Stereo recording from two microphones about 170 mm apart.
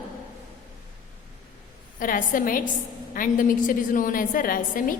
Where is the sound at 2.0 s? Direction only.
55° left (ahead or behind).